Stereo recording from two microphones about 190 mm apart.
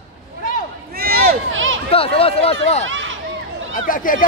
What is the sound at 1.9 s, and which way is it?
Speech, 30° left (ahead or behind).